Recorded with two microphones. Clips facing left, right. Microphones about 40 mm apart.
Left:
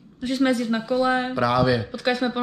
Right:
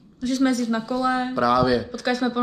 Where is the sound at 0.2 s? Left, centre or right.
Left.